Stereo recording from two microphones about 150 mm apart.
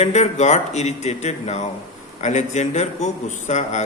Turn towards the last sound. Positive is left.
turn(degrees=50)  # may be behind; listen again after turning